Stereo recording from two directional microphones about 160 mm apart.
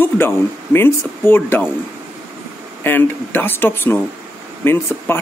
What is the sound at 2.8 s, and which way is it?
Speech, 10° left (ahead or behind).